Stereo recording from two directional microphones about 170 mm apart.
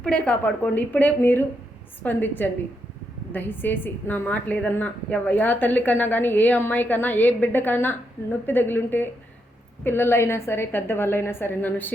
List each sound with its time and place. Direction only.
0.0 s a woman's voice: 5° left (ahead or behind)